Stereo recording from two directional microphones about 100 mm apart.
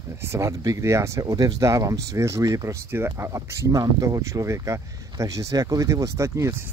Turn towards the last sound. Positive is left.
turn(degrees=-25)  # may be behind; listen again after turning